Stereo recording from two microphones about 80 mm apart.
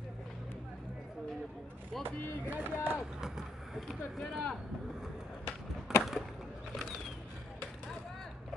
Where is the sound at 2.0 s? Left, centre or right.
Right.